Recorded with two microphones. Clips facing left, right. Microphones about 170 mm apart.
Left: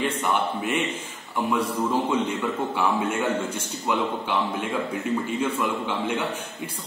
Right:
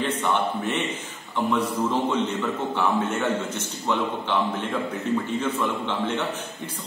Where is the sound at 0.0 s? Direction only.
10° left (ahead or behind).